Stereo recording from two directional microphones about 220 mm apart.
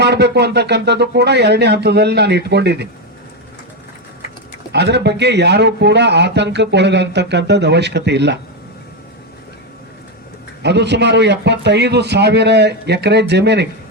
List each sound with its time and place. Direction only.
0.0 s a man's voice: 50° right (ahead or behind)
4.7 s a man's voice: 50° right (ahead or behind)
10.6 s a man's voice: 50° right (ahead or behind)